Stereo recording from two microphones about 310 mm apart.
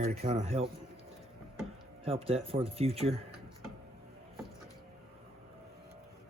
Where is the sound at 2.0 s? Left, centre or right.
Centre.